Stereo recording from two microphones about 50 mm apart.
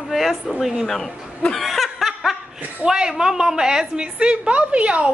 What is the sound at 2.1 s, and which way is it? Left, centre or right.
Laughter, centre.